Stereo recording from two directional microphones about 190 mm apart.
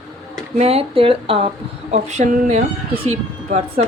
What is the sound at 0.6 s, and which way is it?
Speech, 30° right (ahead or behind).